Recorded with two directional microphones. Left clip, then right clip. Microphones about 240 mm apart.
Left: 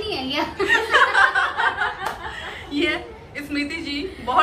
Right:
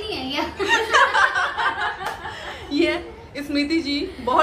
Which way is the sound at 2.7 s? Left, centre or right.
Centre.